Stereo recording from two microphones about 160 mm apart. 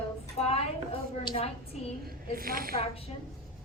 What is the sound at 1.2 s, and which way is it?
Speech, 40° left (ahead or behind).